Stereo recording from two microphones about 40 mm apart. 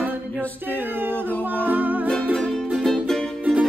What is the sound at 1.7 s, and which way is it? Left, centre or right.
Music, right.